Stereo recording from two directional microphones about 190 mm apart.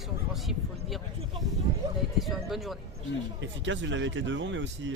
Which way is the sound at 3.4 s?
75° right (ahead or behind).